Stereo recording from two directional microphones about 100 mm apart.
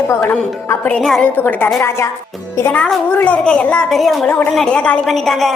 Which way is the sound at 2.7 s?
10° left (ahead or behind).